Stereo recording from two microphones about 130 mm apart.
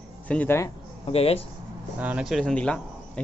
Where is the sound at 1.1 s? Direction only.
50° left (ahead or behind).